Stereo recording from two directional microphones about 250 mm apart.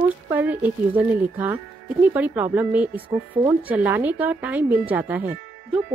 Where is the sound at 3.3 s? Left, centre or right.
Centre.